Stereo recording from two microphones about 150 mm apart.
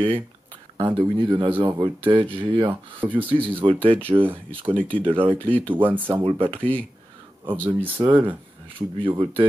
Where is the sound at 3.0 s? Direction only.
10° right (ahead or behind).